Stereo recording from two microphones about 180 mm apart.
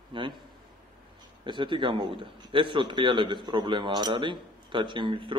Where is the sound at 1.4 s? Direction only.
25° right (ahead or behind).